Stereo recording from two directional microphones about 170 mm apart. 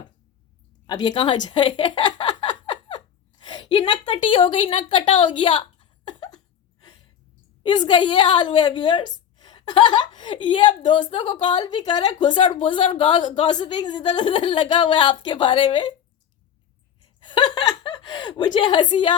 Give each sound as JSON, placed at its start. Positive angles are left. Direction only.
{"t": 0.9, "sound": "a woman's voice", "side_deg": 25}
{"t": 6.1, "sound": "a sound", "side_deg": 25}
{"t": 7.6, "sound": "a woman's voice", "side_deg": 25}
{"t": 17.2, "sound": "chuckle", "side_deg": 30}